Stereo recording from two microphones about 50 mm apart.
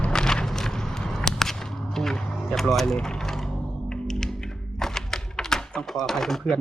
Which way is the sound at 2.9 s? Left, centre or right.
Centre.